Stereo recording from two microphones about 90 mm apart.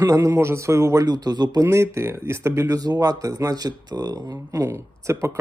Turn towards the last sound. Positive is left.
turn(degrees=-30)  # may be behind; listen again after turning